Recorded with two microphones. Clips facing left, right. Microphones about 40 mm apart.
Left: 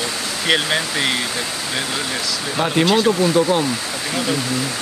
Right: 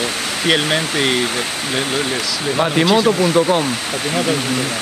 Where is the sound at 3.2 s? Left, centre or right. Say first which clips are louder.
Right 2 dB; right.